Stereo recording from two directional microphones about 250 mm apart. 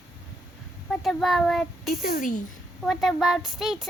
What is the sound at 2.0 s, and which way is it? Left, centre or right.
Speech, left.